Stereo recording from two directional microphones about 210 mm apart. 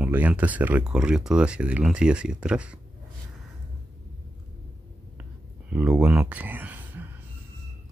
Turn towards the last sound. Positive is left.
turn(degrees=-10)  # may be behind; listen again after turning